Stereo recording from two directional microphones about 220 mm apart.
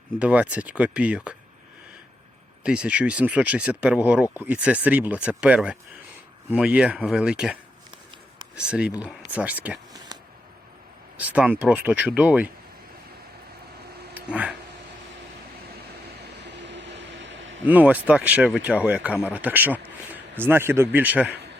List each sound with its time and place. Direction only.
0.2 s speech: 5° right (ahead or behind)
2.6 s speech: 5° right (ahead or behind)
8.6 s speech: 5° right (ahead or behind)
11.2 s speech: 5° right (ahead or behind)
14.1 s a sound: 5° right (ahead or behind)
16.2 s vehicle: 50° right (ahead or behind)
17.7 s speech: 5° right (ahead or behind)